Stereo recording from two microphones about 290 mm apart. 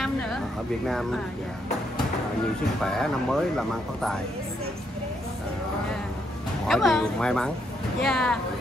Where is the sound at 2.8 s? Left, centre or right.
Centre.